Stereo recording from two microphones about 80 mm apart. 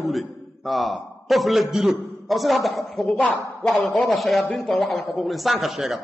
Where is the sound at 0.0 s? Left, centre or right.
Centre.